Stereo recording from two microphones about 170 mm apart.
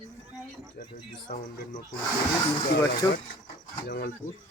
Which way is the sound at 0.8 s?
55° left (ahead or behind).